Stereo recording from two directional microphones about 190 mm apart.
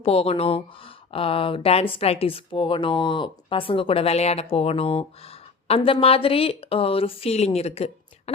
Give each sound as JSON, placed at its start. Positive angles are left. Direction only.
{"t": 0.0, "sound": "speech", "side_deg": 30}